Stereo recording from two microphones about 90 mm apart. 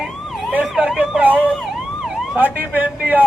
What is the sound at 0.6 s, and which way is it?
Speech, centre (ahead or behind).